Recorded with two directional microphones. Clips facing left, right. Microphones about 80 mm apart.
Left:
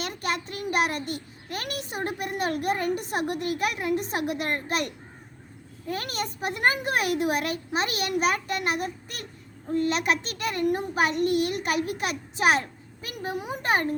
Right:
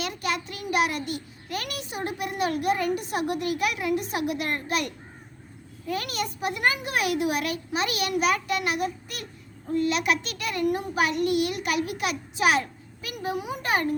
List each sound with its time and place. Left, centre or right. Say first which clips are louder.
0.0 s a child's voice: right 1 dB; left
5.9 s a child's voice: right 1 dB; left